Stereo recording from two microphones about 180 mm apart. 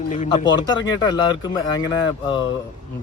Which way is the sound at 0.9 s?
25° left (ahead or behind).